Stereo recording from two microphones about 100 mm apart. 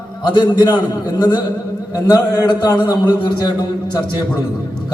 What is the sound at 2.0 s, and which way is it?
A man's voice, 40° left (ahead or behind).